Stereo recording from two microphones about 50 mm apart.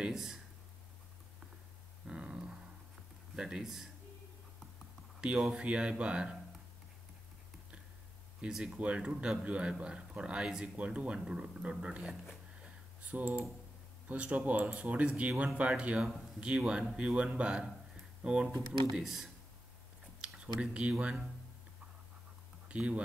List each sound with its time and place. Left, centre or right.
0.0 s speech: centre
2.0 s a sound: centre
3.3 s speech: centre
5.2 s a man's voice: centre
8.4 s speech: centre
8.7 s a man's voice: right
12.6 s a sound: right
14.0 s a man's voice: right
19.0 s speech: centre
20.2 s a sound: right
22.7 s speech: right